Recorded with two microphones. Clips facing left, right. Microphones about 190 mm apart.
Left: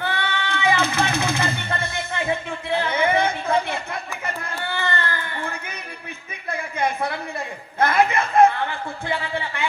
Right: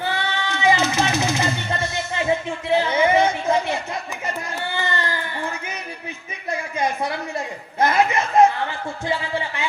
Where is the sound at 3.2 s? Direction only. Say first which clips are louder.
Right 2 dB; 55° left (ahead or behind).